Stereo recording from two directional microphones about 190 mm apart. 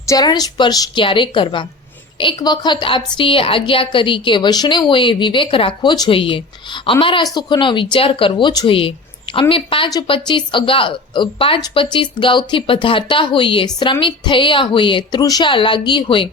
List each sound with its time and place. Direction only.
0.1 s a woman's voice: 20° left (ahead or behind)